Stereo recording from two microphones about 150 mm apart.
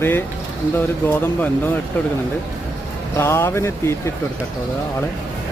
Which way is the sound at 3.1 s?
15° left (ahead or behind).